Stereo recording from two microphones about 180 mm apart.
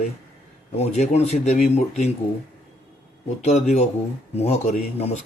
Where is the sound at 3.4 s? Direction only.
40° left (ahead or behind).